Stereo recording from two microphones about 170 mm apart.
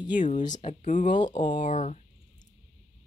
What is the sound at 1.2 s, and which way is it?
Speech, 30° left (ahead or behind).